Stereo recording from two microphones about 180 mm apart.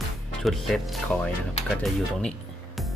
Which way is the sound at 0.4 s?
Centre (ahead or behind).